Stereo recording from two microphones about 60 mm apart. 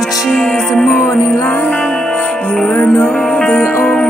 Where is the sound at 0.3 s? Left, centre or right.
Centre.